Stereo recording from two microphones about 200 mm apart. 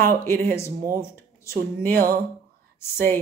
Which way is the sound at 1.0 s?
10° left (ahead or behind).